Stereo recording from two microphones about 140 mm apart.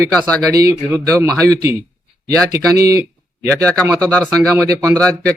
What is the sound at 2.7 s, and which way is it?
Speech, 25° right (ahead or behind).